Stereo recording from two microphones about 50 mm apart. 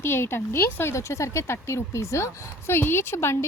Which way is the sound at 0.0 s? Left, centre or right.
Left.